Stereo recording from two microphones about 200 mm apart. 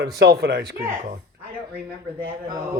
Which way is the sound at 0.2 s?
55° right (ahead or behind).